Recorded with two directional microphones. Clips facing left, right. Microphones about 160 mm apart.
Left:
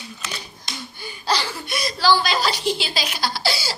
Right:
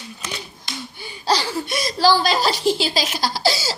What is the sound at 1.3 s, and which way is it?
Speech, 40° right (ahead or behind).